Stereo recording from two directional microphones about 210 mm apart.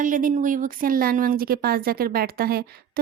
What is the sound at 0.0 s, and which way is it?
Speech, 40° right (ahead or behind).